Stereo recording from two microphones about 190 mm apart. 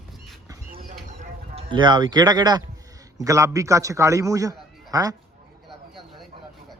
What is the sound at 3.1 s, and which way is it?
A man's voice, 15° right (ahead or behind).